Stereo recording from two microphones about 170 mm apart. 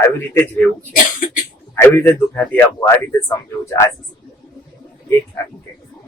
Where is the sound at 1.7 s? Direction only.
15° left (ahead or behind).